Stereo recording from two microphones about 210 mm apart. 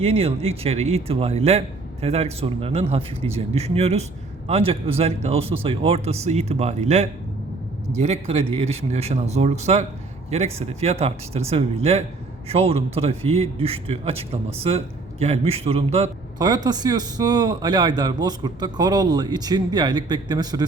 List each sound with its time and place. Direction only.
0.0 s a man's voice: 25° right (ahead or behind)
15.2 s a man's voice: 30° right (ahead or behind)